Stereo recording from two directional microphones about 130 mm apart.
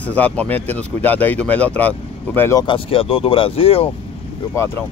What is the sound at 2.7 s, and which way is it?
Speech, 45° left (ahead or behind).